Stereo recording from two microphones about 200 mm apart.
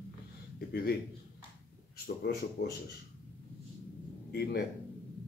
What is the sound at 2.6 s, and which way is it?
Speech, 50° left (ahead or behind).